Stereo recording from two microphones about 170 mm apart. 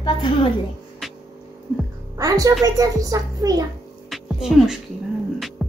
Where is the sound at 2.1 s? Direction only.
20° right (ahead or behind).